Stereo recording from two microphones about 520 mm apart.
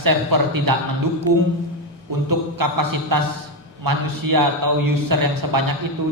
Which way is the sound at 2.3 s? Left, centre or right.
Right.